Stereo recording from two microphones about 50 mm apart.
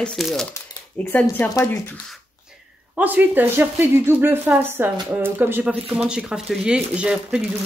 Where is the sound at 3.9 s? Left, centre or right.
Right.